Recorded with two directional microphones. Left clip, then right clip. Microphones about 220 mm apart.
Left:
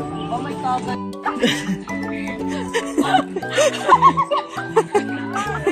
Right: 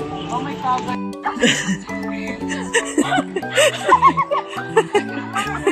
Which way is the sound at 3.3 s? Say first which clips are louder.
Right 2 dB; 5° right (ahead or behind).